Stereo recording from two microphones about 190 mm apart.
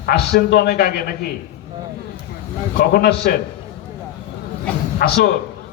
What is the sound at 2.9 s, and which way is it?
Speech, 55° left (ahead or behind).